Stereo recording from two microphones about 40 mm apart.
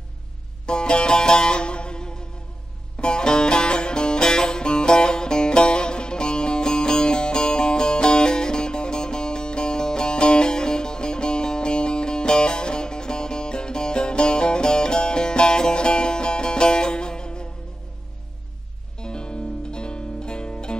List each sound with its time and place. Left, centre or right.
0.7 s music: left
18.9 s music: left